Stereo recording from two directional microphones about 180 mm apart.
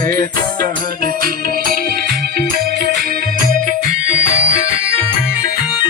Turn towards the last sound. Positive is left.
turn(degrees=45)  # may be behind; listen again after turning